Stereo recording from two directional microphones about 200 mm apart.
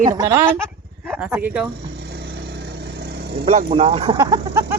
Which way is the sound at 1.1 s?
5° right (ahead or behind).